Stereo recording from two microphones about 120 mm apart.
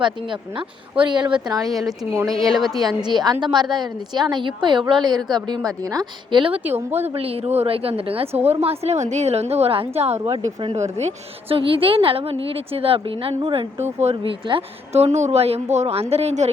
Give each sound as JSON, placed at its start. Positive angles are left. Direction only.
{"t": 0.0, "sound": "a woman's voice", "side_deg": -45}
{"t": 1.6, "sound": "speech", "side_deg": 0}
{"t": 3.0, "sound": "a woman's voice", "side_deg": -35}
{"t": 6.6, "sound": "speech", "side_deg": -20}
{"t": 7.1, "sound": "a woman's voice", "side_deg": -55}
{"t": 10.2, "sound": "a woman's voice", "side_deg": -40}
{"t": 10.9, "sound": "a woman's voice", "side_deg": -60}
{"t": 13.8, "sound": "a woman's voice", "side_deg": -65}